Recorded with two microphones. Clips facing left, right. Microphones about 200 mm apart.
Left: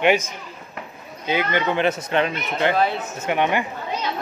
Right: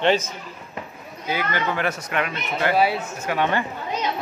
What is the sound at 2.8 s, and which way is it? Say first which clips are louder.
Speech: right 1 dB; 10° right (ahead or behind).